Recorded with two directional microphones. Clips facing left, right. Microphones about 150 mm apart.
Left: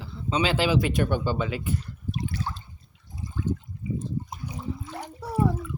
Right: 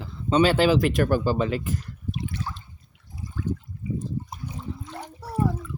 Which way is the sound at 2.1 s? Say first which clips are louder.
Left 1 dB; 40° left (ahead or behind).